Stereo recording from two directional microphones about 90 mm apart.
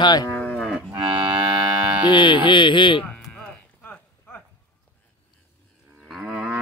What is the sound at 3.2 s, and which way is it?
Livestock, 10° left (ahead or behind).